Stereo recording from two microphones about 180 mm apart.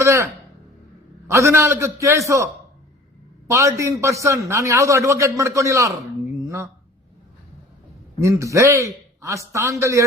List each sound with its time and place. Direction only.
0.0 s speech: 15° right (ahead or behind)
1.3 s a man's voice: 15° right (ahead or behind)
8.2 s a man's voice: 15° right (ahead or behind)